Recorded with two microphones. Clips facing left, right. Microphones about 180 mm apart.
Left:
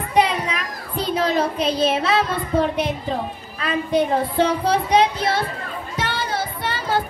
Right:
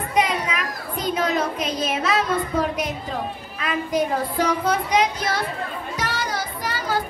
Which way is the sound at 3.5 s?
30° left (ahead or behind).